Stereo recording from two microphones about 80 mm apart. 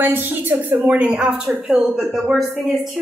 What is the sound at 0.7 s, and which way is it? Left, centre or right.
A woman's voice, centre.